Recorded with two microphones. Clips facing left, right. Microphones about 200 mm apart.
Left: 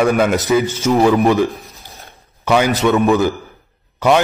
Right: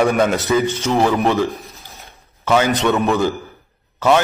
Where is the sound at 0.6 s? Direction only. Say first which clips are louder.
Left 2 dB; 15° right (ahead or behind).